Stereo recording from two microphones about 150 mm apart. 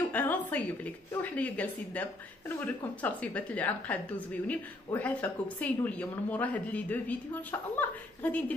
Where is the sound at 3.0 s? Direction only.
10° left (ahead or behind).